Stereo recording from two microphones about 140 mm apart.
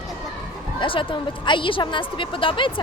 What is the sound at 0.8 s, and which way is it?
A woman's voice, 40° left (ahead or behind).